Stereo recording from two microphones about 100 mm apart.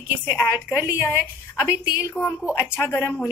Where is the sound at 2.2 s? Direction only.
25° left (ahead or behind).